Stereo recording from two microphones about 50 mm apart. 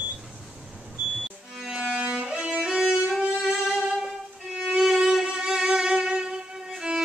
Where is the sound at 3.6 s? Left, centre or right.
Centre.